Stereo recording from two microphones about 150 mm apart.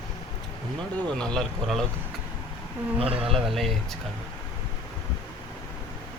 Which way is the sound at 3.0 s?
40° right (ahead or behind).